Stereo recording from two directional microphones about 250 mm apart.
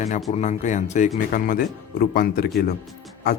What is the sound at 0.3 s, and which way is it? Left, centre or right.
A man's voice, left.